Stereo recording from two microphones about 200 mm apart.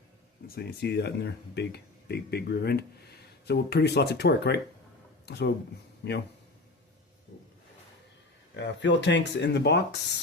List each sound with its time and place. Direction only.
0.4 s speech: 50° left (ahead or behind)
8.5 s speech: 60° left (ahead or behind)